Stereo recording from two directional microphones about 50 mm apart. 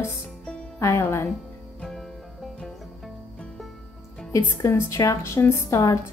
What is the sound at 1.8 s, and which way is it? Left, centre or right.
Music, centre.